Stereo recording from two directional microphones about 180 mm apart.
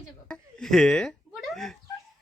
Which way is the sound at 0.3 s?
5° left (ahead or behind).